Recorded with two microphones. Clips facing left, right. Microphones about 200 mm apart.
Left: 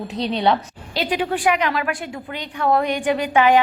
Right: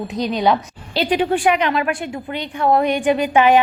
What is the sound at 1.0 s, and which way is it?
A woman's voice, 30° right (ahead or behind).